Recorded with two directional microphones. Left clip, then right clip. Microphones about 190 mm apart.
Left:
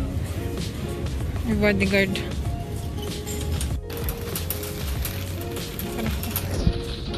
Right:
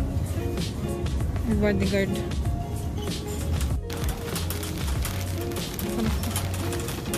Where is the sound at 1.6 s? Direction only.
Centre (ahead or behind).